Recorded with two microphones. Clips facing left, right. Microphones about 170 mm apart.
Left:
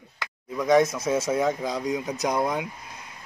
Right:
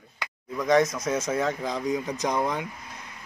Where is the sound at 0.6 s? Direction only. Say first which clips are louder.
Left 2 dB; 5° left (ahead or behind).